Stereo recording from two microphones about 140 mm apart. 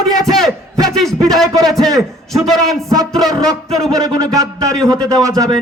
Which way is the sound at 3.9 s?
25° right (ahead or behind).